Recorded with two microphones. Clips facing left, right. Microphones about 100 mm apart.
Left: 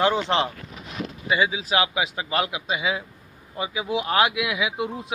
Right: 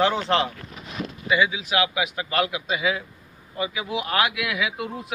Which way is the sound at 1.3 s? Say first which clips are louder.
Even; 35° left (ahead or behind).